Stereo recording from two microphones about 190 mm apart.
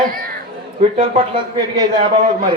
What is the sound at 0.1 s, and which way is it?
Chatter, 50° right (ahead or behind).